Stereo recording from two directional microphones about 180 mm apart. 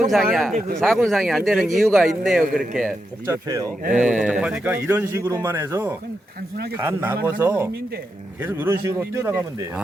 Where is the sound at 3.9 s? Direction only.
5° right (ahead or behind).